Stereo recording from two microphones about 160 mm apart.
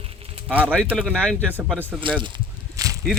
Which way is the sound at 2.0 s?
30° right (ahead or behind).